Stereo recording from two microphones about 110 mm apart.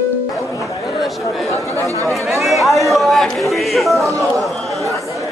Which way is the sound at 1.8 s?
30° right (ahead or behind).